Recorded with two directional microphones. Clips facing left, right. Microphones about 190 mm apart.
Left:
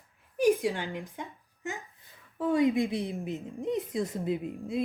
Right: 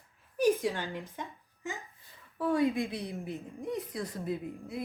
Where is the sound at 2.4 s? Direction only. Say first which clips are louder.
Left 3 dB; 20° left (ahead or behind).